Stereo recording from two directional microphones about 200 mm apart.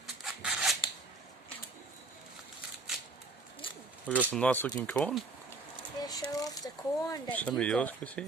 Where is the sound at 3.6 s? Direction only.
25° left (ahead or behind).